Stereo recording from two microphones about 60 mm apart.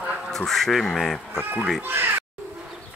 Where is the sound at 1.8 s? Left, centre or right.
Right.